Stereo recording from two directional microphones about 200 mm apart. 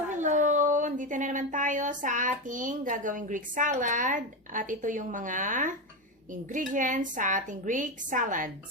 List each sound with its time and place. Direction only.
0.1 s speech: 40° right (ahead or behind)